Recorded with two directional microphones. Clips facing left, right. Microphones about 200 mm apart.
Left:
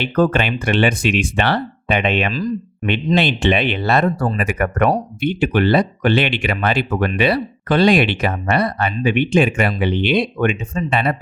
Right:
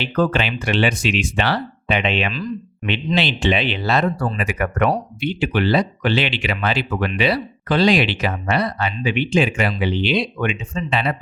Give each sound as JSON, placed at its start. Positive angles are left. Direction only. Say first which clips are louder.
{"t": 0.0, "sound": "speech", "louder": "left 3 dB", "side_deg": 50}